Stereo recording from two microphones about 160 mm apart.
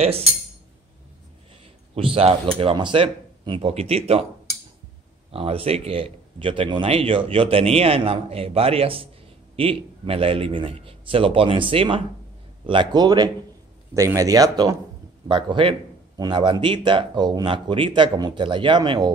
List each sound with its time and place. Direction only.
2.0 s speech: 35° right (ahead or behind)
5.3 s speech: 35° right (ahead or behind)